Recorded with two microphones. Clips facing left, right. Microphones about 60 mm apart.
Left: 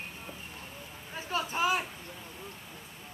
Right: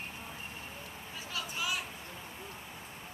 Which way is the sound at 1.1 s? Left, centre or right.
Left.